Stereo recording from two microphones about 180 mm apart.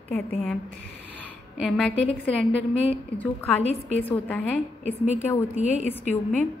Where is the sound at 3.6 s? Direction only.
35° left (ahead or behind).